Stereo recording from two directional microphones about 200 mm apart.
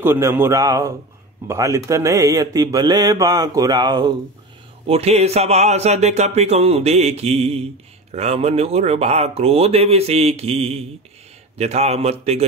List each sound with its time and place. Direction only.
0.0 s speech: 10° right (ahead or behind); by 12.4 s 30° right (ahead or behind)